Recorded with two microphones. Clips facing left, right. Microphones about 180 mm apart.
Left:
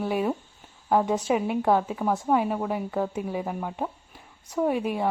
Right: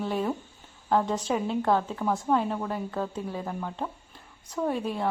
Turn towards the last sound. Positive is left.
turn(degrees=15)  # may be behind; listen again after turning